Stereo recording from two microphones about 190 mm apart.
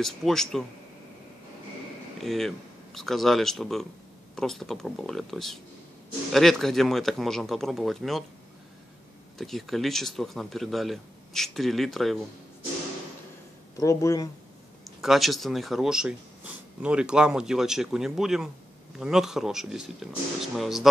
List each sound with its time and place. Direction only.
0.0 s speech: centre (ahead or behind)
2.1 s speech: centre (ahead or behind)
9.4 s speech: centre (ahead or behind)
13.7 s speech: 15° left (ahead or behind)
15.0 s speech: centre (ahead or behind)